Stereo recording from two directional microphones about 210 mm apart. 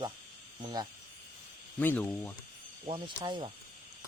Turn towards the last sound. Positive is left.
turn(degrees=-25)  # may be behind; listen again after turning